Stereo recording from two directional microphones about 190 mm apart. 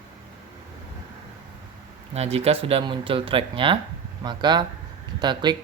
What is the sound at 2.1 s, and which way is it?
Speech, 35° right (ahead or behind).